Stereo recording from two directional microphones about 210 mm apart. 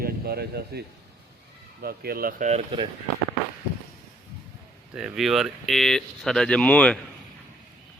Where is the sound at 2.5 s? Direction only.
25° right (ahead or behind).